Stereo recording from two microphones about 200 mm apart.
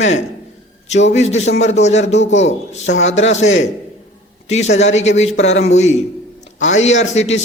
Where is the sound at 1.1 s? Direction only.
35° left (ahead or behind).